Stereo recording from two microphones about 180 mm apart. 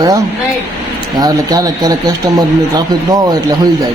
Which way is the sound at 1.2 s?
20° right (ahead or behind).